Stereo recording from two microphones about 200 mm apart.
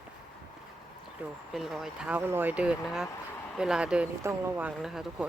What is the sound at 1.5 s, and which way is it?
Speech, centre (ahead or behind).